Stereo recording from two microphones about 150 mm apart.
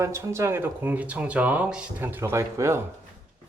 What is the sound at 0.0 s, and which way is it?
Speech, 20° right (ahead or behind).